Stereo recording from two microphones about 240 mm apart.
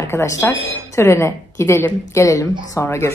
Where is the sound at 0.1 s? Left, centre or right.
Centre.